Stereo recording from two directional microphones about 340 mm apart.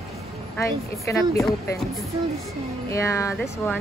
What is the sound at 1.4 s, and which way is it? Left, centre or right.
Speech, centre.